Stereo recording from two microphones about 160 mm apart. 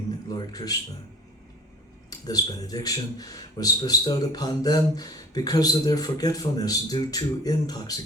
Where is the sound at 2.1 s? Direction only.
25° left (ahead or behind).